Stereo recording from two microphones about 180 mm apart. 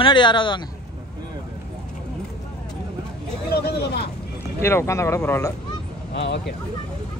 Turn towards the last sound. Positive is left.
turn(degrees=70)  # may be behind; listen again after turning